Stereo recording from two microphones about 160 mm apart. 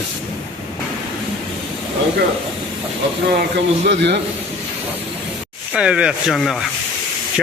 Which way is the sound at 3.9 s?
90° right.